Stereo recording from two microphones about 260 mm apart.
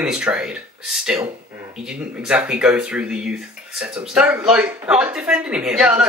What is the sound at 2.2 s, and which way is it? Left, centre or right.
Speech, centre.